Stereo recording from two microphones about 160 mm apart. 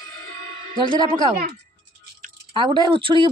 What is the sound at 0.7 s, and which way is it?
Speech, 30° right (ahead or behind).